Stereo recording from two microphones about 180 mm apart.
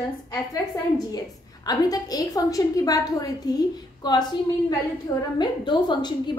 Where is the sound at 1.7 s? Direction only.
20° left (ahead or behind).